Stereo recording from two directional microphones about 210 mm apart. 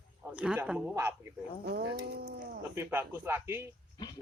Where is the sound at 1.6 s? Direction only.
50° right (ahead or behind).